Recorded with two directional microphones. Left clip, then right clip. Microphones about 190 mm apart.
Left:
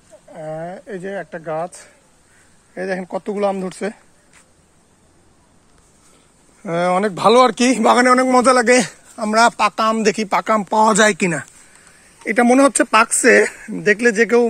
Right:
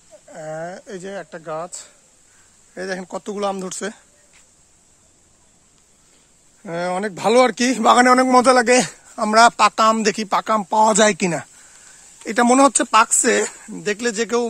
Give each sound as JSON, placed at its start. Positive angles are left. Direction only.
{"t": 0.3, "sound": "a sound", "side_deg": -40}
{"t": 2.7, "sound": "speech", "side_deg": -15}
{"t": 6.6, "sound": "speech", "side_deg": -10}
{"t": 10.1, "sound": "speech", "side_deg": -25}
{"t": 12.7, "sound": "speech", "side_deg": 0}